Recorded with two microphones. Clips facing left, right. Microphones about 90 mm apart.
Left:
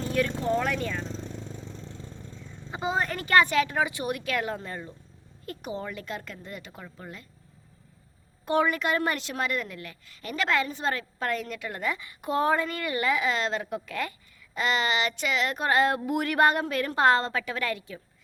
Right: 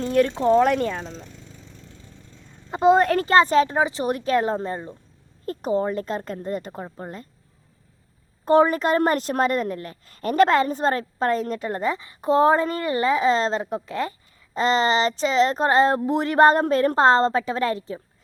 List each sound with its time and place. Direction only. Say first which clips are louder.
0.0 s speech: right 8 dB; 45° right (ahead or behind)
2.7 s speech: right 12 dB; 60° right (ahead or behind)
3.2 s a woman's voice: right 1 dB; 30° right (ahead or behind)
8.4 s a woman's voice: right 7 dB; 35° right (ahead or behind)